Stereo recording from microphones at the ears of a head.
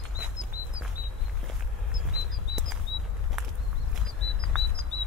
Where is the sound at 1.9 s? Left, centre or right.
Left.